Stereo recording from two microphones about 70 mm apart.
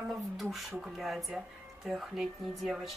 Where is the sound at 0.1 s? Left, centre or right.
Centre.